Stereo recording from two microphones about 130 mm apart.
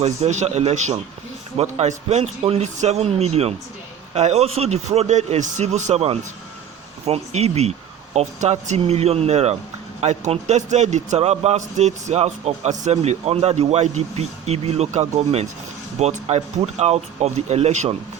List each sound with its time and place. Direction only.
0.0 s a man's voice: 60° right (ahead or behind)
8.8 s a man's voice: 55° right (ahead or behind)